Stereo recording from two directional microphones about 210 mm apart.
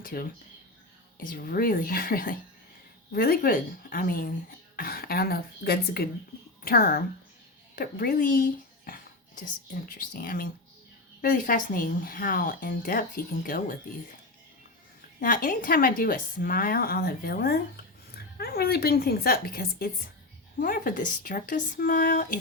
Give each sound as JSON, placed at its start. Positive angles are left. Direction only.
{"t": 0.0, "sound": "a woman's voice", "side_deg": 45}
{"t": 7.8, "sound": "a sound", "side_deg": 45}
{"t": 10.1, "sound": "a woman's voice", "side_deg": 40}
{"t": 15.2, "sound": "a woman's voice", "side_deg": 40}